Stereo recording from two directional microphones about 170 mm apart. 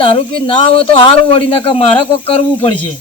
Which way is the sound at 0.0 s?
35° left (ahead or behind).